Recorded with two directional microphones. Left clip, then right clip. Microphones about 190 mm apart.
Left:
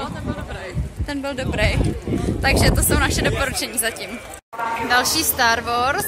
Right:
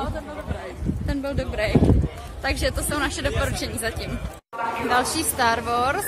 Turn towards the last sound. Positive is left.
turn(degrees=-10)  # may be behind; listen again after turning